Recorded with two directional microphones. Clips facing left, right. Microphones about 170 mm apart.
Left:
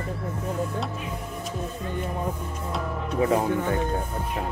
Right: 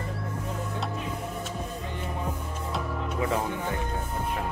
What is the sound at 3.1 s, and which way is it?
Speech, 35° left (ahead or behind).